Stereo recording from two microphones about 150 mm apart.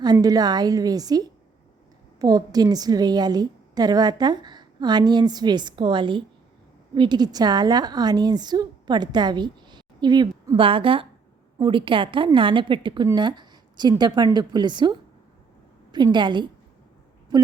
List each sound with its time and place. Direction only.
0.0 s a woman's voice: 25° right (ahead or behind)
10.6 s a woman's voice: 35° right (ahead or behind)
13.1 s a sound: 30° right (ahead or behind)
14.3 s a woman's voice: 30° right (ahead or behind)
16.1 s a woman's voice: 30° right (ahead or behind)